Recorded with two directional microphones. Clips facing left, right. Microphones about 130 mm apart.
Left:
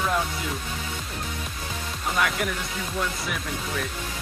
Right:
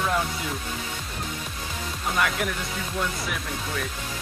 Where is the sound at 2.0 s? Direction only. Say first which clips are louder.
Even; centre (ahead or behind).